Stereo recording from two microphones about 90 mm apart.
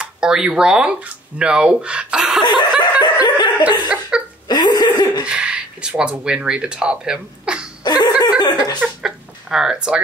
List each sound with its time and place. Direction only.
0.0 s speech: 10° right (ahead or behind)
2.4 s chuckle: 50° left (ahead or behind)
2.8 s snicker: 55° left (ahead or behind)
4.1 s chuckle: 10° right (ahead or behind)
4.5 s hiccup: 50° left (ahead or behind)
5.2 s speech: 10° right (ahead or behind)
7.8 s chuckle: 50° left (ahead or behind)
8.4 s a sound: 50° left (ahead or behind)
9.0 s a sound: 5° right (ahead or behind)